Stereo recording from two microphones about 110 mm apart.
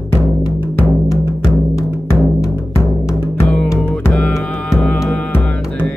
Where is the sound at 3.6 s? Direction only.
25° left (ahead or behind).